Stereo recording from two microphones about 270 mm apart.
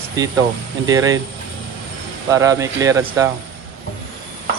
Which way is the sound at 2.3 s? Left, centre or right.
Centre.